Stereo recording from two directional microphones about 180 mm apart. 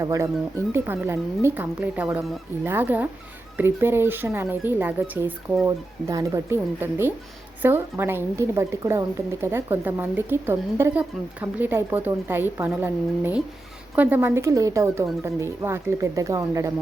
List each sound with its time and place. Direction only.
0.0 s a woman's voice: 15° right (ahead or behind)